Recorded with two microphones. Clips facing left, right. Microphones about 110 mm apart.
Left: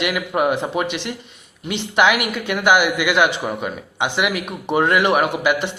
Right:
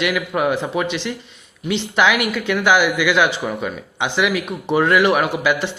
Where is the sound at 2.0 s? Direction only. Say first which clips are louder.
Left 1 dB; 15° left (ahead or behind).